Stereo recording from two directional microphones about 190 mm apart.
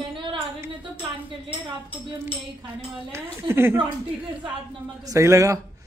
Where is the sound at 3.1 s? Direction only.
15° right (ahead or behind).